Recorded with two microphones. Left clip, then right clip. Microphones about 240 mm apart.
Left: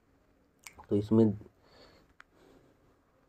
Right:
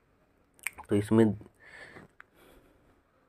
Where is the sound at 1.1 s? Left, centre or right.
Right.